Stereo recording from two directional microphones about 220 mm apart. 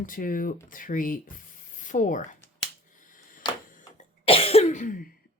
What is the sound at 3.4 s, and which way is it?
Camera, 20° left (ahead or behind).